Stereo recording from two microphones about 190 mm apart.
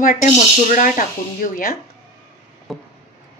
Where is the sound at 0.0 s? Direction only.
45° left (ahead or behind).